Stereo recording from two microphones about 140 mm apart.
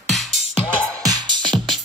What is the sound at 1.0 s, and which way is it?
Music, 25° right (ahead or behind).